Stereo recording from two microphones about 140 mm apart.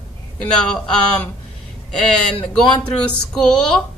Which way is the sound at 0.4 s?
5° left (ahead or behind).